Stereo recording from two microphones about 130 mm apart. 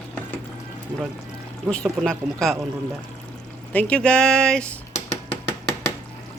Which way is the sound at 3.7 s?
10° left (ahead or behind).